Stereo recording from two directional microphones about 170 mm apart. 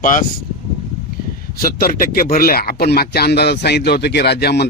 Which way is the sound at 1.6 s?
60° left (ahead or behind).